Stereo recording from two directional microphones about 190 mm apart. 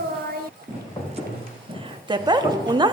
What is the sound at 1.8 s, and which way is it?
A woman's voice, 25° right (ahead or behind).